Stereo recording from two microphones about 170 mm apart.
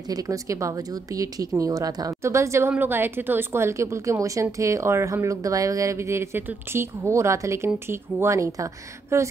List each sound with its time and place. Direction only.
0.1 s a woman's voice: 20° right (ahead or behind)